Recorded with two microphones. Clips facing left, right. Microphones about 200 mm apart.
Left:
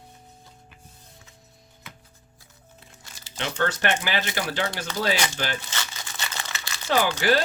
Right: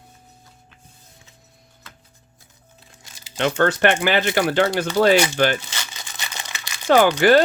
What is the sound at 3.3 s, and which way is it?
Speech, 60° right (ahead or behind).